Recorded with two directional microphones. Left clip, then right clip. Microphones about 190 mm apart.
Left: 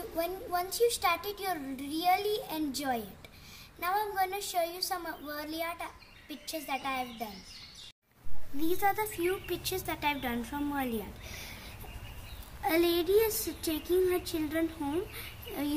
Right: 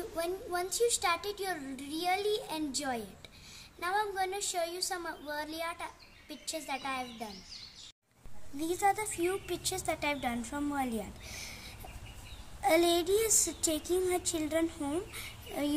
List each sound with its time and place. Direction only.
0.1 s a child's voice: 5° right (ahead or behind)
8.5 s a woman's voice: 60° right (ahead or behind)
12.6 s a woman's voice: 60° right (ahead or behind)